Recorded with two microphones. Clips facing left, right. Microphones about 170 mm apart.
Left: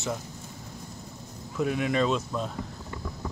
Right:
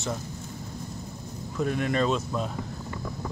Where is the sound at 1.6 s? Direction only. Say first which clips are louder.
Even; 5° left (ahead or behind).